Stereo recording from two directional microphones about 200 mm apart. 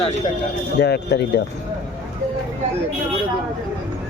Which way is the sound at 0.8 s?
55° left (ahead or behind).